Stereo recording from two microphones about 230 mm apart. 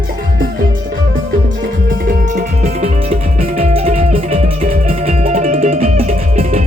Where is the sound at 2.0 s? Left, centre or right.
Right.